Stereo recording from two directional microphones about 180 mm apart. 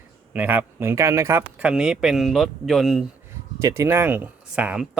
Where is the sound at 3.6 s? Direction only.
20° right (ahead or behind).